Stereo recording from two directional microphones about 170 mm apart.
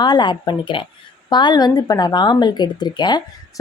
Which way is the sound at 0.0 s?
25° left (ahead or behind).